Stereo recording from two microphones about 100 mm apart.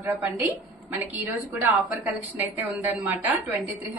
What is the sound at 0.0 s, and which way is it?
A woman's voice, 20° right (ahead or behind).